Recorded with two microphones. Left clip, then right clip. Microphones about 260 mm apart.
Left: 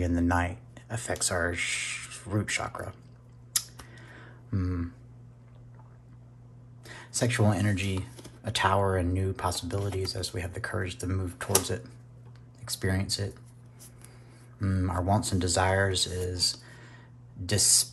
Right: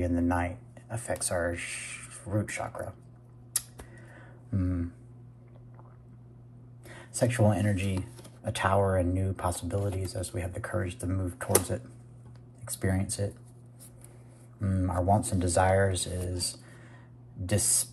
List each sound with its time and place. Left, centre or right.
0.0 s speech: centre
3.5 s a sound: centre
6.9 s speech: centre
12.8 s speech: centre
14.6 s speech: centre